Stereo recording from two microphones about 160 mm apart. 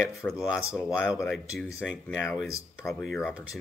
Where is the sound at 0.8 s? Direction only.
5° right (ahead or behind).